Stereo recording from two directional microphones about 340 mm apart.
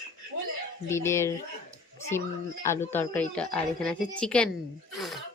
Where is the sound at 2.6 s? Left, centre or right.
Centre.